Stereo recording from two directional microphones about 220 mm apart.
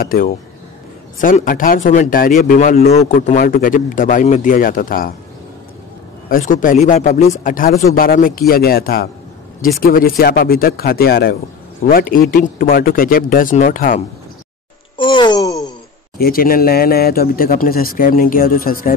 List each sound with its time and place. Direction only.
0.0 s a man's voice: 40° left (ahead or behind)
6.2 s a man's voice: 40° left (ahead or behind)
15.0 s a sound: 20° left (ahead or behind)
16.2 s a man's voice: 40° left (ahead or behind)